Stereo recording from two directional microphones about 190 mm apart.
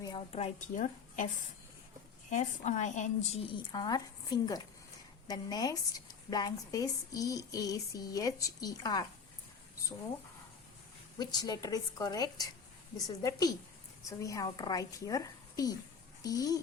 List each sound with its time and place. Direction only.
0.0 s a woman's voice: 25° left (ahead or behind)
2.3 s a woman's voice: 40° left (ahead or behind)
3.5 s a woman's voice: 20° left (ahead or behind)
11.2 s a woman's voice: 20° left (ahead or behind)